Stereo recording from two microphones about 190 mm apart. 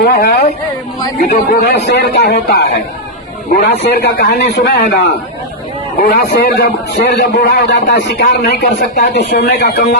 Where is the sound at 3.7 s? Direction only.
60° left (ahead or behind).